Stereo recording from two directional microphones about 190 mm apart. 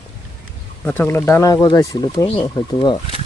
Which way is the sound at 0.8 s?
10° left (ahead or behind).